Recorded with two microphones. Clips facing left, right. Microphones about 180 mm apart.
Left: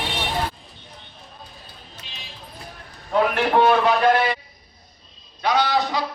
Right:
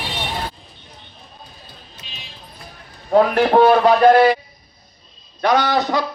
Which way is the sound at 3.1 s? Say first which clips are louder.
Right 6 dB; 40° right (ahead or behind).